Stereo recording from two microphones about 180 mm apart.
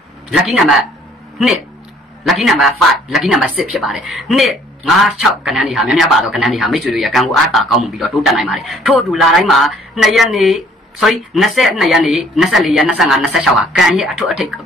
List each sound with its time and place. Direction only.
0.4 s speech: centre (ahead or behind)
2.2 s speech: centre (ahead or behind)